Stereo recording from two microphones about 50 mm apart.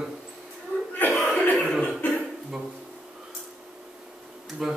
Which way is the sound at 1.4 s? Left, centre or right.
Left.